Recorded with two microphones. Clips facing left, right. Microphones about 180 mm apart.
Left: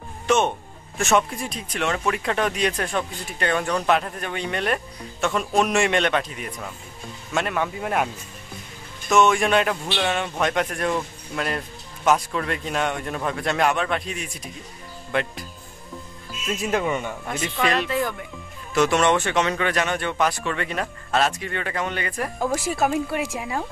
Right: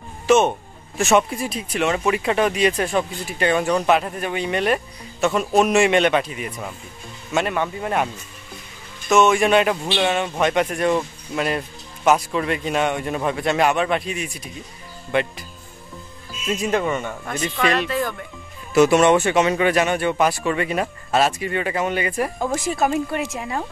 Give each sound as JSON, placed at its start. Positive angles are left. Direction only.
{"t": 0.3, "sound": "speech", "side_deg": -5}
{"t": 9.1, "sound": "speech", "side_deg": -5}
{"t": 16.4, "sound": "speech", "side_deg": 0}
{"t": 17.8, "sound": "speech", "side_deg": 20}
{"t": 18.7, "sound": "speech", "side_deg": -10}
{"t": 22.6, "sound": "speech", "side_deg": 5}